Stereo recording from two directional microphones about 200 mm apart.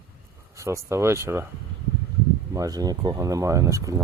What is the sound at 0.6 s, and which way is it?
Speech, 15° right (ahead or behind).